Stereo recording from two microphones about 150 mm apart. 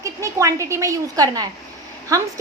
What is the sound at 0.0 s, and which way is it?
A woman's voice, 20° right (ahead or behind).